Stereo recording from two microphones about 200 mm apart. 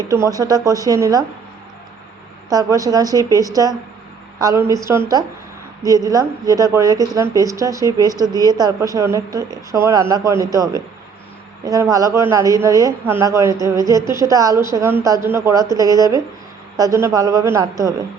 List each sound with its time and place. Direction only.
0.1 s a woman's voice: 15° right (ahead or behind)
2.5 s a woman's voice: 15° right (ahead or behind)